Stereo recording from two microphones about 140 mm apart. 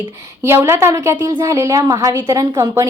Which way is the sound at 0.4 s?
20° right (ahead or behind).